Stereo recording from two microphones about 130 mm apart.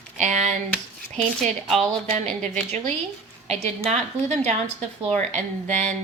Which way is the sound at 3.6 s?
55° right (ahead or behind).